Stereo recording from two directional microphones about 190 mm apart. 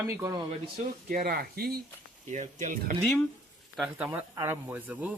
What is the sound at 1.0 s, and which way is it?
Speech, 50° right (ahead or behind).